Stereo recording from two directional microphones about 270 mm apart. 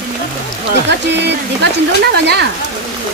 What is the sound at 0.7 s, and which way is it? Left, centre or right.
Speech, right.